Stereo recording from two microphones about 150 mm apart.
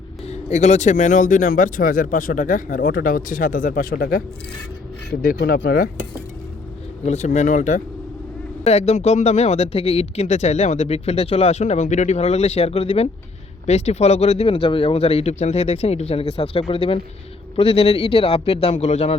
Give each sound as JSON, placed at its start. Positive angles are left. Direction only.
{"t": 0.3, "sound": "speech", "side_deg": 50}
{"t": 5.2, "sound": "speech", "side_deg": 80}
{"t": 7.0, "sound": "speech", "side_deg": 50}
{"t": 8.6, "sound": "a man's voice", "side_deg": 45}